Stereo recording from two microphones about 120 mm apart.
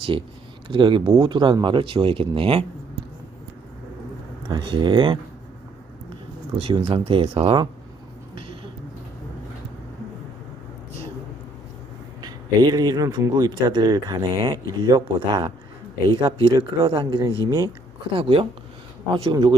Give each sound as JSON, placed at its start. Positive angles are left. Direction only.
{"t": 0.7, "sound": "speech", "side_deg": -45}
{"t": 4.4, "sound": "speech", "side_deg": -40}
{"t": 6.6, "sound": "speech", "side_deg": -50}
{"t": 8.4, "sound": "a sound", "side_deg": -45}
{"t": 12.2, "sound": "speech", "side_deg": -35}
{"t": 16.0, "sound": "speech", "side_deg": -45}
{"t": 17.4, "sound": "speech", "side_deg": -30}
{"t": 18.2, "sound": "speech", "side_deg": -50}
{"t": 19.1, "sound": "speech", "side_deg": -35}